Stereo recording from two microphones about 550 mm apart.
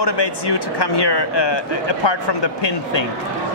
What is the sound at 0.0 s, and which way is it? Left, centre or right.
Speech, left.